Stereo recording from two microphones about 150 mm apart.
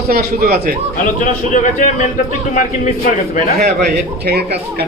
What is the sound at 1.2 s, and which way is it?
A man's voice, 60° left (ahead or behind).